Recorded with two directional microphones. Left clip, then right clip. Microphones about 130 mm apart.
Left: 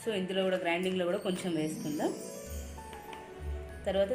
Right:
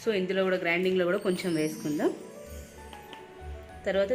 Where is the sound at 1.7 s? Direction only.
Centre (ahead or behind).